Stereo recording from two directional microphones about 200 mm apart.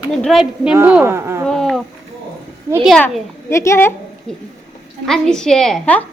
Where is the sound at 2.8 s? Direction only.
Centre (ahead or behind).